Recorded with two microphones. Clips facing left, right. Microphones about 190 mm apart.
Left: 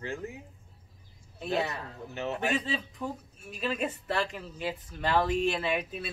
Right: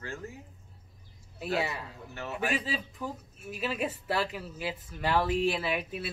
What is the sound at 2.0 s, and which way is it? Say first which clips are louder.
Speech: left 10 dB; 20° left (ahead or behind).